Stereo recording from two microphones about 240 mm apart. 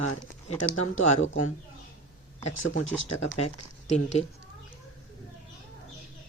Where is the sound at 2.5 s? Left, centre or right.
Left.